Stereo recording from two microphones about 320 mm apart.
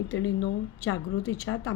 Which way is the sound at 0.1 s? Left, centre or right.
Left.